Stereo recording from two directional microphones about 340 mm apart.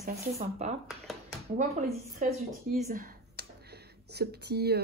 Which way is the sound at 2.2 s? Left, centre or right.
Right.